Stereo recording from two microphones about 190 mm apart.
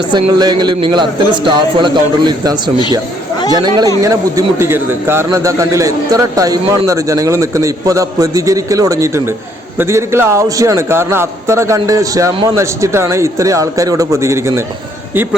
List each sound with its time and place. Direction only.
0.1 s a man's voice: 20° right (ahead or behind)